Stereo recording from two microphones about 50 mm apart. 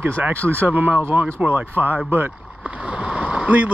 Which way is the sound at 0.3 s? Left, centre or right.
Right.